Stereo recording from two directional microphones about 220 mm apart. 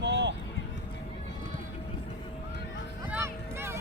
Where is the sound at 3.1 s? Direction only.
10° right (ahead or behind).